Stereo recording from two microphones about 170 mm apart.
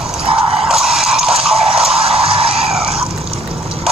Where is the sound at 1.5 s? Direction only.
35° right (ahead or behind).